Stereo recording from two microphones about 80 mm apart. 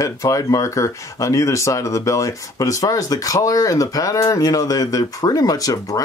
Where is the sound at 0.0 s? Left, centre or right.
Left.